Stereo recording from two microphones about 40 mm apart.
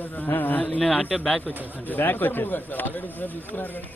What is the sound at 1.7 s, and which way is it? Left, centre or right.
A man's voice, left.